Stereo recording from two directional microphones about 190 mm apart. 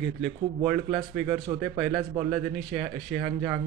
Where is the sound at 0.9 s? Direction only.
25° right (ahead or behind).